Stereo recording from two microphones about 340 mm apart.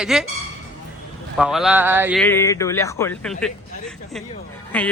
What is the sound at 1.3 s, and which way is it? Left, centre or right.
Speech, centre.